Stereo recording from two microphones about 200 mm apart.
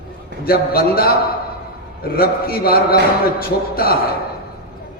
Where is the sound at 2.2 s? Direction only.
50° left (ahead or behind).